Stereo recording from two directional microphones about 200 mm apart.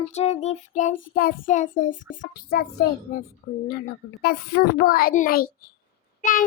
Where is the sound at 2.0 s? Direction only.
70° left (ahead or behind).